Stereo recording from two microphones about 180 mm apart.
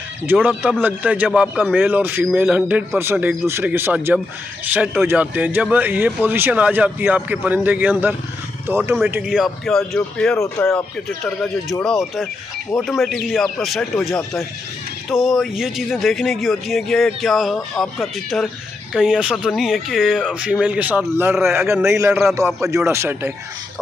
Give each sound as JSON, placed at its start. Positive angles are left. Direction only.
{"t": 0.3, "sound": "speech", "side_deg": -5}
{"t": 10.3, "sound": "speech", "side_deg": 15}
{"t": 11.2, "sound": "speech", "side_deg": 5}